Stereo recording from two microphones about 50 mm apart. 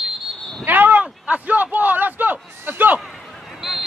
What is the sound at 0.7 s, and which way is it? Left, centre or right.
A man's voice, right.